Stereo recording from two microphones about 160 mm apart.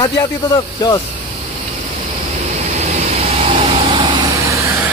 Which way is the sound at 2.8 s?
45° right (ahead or behind).